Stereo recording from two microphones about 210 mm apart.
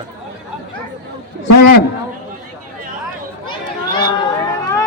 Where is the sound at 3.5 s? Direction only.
20° left (ahead or behind).